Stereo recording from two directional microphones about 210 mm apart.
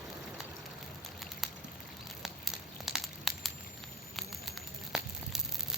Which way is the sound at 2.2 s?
Centre (ahead or behind).